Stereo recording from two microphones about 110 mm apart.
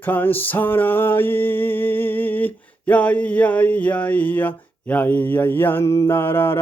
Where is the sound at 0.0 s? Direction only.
15° left (ahead or behind).